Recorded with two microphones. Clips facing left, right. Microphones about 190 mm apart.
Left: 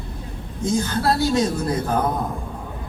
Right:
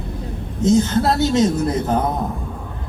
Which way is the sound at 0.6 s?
20° right (ahead or behind).